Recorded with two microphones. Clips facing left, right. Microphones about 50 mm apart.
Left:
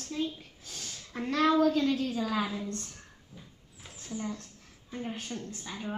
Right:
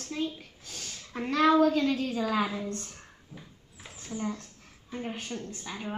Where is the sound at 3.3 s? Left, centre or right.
Right.